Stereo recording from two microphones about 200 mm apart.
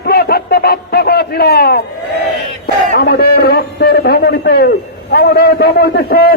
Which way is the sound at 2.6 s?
55° left (ahead or behind).